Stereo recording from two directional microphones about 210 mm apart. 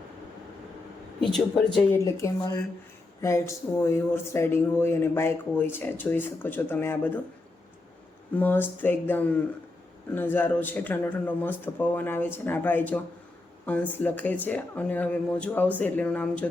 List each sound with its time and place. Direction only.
1.2 s speech: centre (ahead or behind)
2.0 s speech: 15° left (ahead or behind)
8.4 s speech: 10° left (ahead or behind)